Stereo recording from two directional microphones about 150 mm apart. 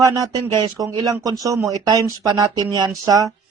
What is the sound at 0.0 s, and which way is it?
Speech, 25° right (ahead or behind).